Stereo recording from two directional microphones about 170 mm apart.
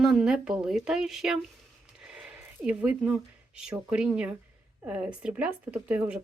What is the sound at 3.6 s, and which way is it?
Speech, 5° right (ahead or behind).